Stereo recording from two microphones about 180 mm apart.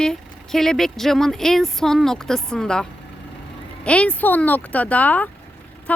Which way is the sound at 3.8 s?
5° left (ahead or behind).